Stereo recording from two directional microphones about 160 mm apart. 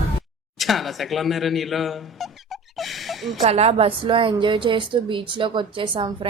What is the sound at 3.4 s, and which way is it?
A woman's voice, 40° right (ahead or behind).